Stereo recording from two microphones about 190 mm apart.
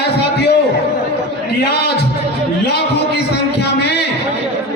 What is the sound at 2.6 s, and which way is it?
Speech, 60° left (ahead or behind).